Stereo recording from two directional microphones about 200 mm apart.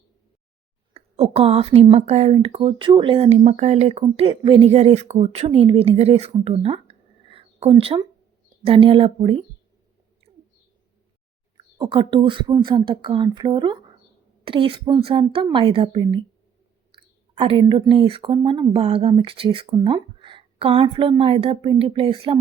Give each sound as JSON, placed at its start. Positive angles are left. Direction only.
{"t": 0.9, "sound": "speech", "side_deg": -30}
{"t": 11.5, "sound": "speech", "side_deg": -25}